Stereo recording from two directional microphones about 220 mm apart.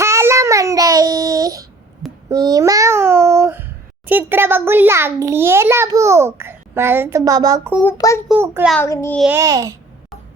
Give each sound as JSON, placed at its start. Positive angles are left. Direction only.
{"t": 0.0, "sound": "child singing", "side_deg": -10}
{"t": 2.3, "sound": "a child's voice", "side_deg": -15}
{"t": 7.8, "sound": "a child's voice", "side_deg": 10}
{"t": 8.3, "sound": "a child's voice", "side_deg": -5}
{"t": 8.7, "sound": "a child's voice", "side_deg": 10}
{"t": 9.1, "sound": "a child's voice", "side_deg": -5}
{"t": 9.4, "sound": "a child's voice", "side_deg": -15}